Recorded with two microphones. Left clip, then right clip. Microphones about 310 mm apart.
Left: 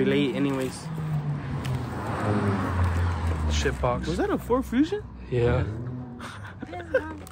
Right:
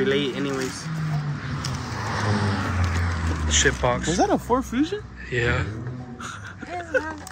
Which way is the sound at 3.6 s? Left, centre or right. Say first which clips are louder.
Right 3 dB; centre.